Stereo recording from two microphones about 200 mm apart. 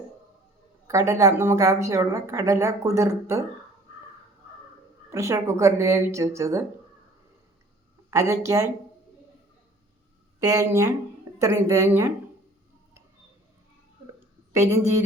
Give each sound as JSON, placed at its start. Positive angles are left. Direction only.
{"t": 0.9, "sound": "a woman's voice", "side_deg": -15}
{"t": 5.1, "sound": "a woman's voice", "side_deg": -15}
{"t": 8.1, "sound": "a woman's voice", "side_deg": -15}
{"t": 10.4, "sound": "a woman's voice", "side_deg": -15}
{"t": 14.5, "sound": "a woman's voice", "side_deg": -15}